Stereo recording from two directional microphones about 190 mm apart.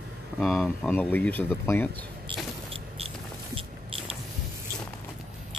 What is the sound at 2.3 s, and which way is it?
Vehicle, 25° right (ahead or behind).